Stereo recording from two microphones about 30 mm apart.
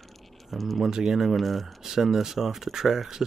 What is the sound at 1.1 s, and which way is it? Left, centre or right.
Speech, centre.